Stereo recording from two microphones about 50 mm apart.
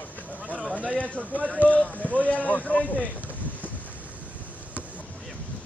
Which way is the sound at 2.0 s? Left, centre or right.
Right.